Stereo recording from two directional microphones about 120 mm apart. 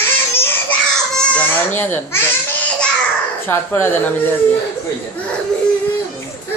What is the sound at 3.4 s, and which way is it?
Speech, 20° left (ahead or behind).